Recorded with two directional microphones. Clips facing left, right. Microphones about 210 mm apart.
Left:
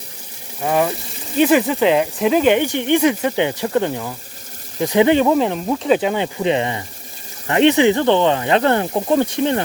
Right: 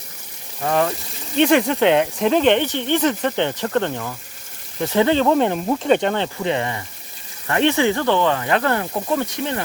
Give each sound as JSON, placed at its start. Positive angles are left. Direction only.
{"t": 0.6, "sound": "speech", "side_deg": 10}
{"t": 5.3, "sound": "speech", "side_deg": 0}